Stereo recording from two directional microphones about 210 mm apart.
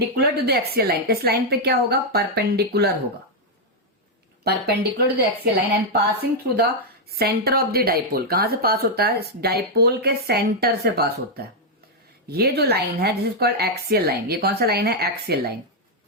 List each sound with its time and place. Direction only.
0.0 s speech: 50° right (ahead or behind)
4.4 s speech: 50° right (ahead or behind)